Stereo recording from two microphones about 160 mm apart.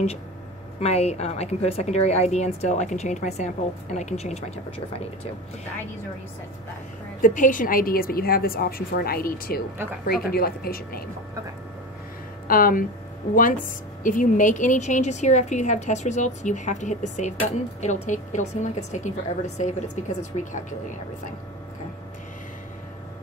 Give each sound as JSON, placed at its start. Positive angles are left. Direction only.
{"t": 0.7, "sound": "a woman's voice", "side_deg": 40}
{"t": 7.2, "sound": "a woman's voice", "side_deg": 55}
{"t": 12.4, "sound": "a woman's voice", "side_deg": 60}
{"t": 20.3, "sound": "speech", "side_deg": 40}